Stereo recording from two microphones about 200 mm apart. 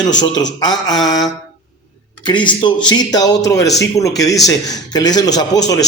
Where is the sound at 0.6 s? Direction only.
20° left (ahead or behind).